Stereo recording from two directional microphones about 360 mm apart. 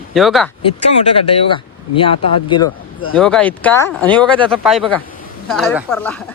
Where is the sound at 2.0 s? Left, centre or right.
Centre.